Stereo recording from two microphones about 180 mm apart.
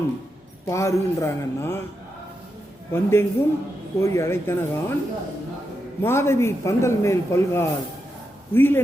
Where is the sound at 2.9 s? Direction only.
15° left (ahead or behind).